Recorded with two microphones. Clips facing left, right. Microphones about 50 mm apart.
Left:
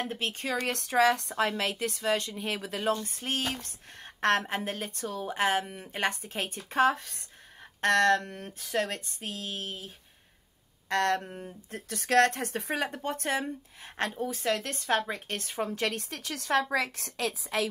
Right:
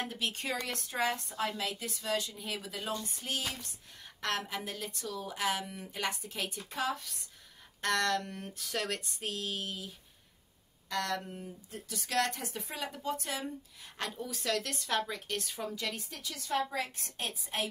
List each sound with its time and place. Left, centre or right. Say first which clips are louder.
0.1 s speech: left 4 dB; left
0.7 s a woman's voice: left 11 dB; left
9.6 s speech: left 1 dB; left
10.9 s a woman's voice: left 7 dB; left
15.7 s a woman's voice: left 7 dB; left